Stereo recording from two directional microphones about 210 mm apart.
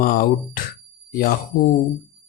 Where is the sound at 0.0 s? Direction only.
40° left (ahead or behind).